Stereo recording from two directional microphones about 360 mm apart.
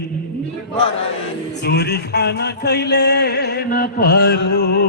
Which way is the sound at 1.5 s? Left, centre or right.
Left.